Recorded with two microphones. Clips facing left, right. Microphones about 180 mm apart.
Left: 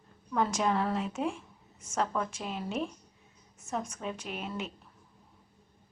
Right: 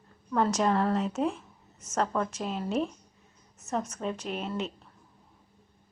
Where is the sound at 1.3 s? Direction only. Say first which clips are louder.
Even; 10° left (ahead or behind).